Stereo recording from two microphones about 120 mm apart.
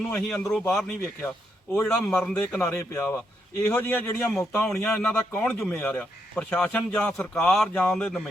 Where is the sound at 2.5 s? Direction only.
25° left (ahead or behind).